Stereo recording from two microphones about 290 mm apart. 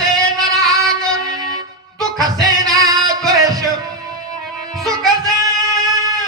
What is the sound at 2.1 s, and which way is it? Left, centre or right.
Music, centre.